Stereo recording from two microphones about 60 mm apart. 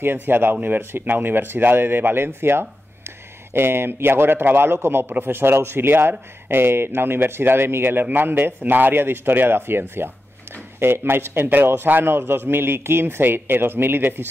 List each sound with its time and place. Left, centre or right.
0.0 s speech: right